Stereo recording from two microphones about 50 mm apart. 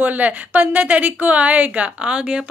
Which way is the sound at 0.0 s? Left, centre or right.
Right.